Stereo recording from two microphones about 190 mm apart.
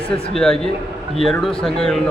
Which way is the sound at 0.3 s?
5° left (ahead or behind).